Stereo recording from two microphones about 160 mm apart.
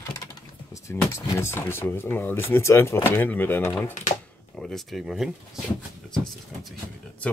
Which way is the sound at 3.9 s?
50° left (ahead or behind).